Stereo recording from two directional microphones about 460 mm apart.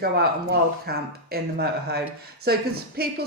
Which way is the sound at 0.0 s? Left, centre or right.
Centre.